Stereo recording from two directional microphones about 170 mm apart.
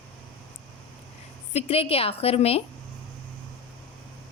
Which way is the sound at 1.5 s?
35° left (ahead or behind).